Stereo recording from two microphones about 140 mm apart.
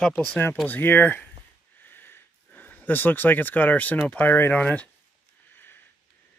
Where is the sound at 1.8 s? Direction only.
15° left (ahead or behind).